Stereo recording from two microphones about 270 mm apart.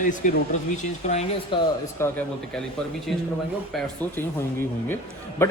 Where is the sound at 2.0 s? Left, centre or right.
Centre.